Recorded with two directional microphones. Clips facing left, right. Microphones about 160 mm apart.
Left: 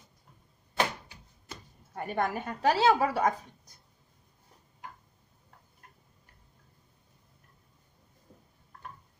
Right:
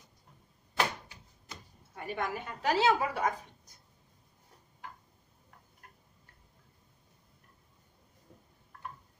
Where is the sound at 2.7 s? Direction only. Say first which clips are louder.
Left 3 dB; 35° left (ahead or behind).